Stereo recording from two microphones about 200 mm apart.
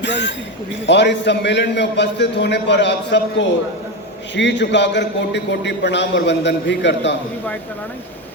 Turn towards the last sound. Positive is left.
turn(degrees=60)  # may be behind; listen again after turning